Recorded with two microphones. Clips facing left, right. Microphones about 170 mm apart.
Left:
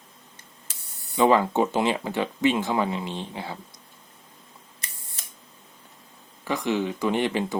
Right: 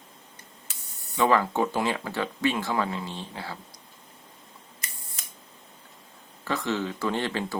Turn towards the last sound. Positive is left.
turn(degrees=15)  # may be behind; listen again after turning